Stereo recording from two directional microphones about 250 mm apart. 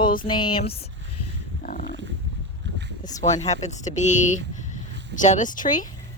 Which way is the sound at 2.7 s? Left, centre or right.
Right.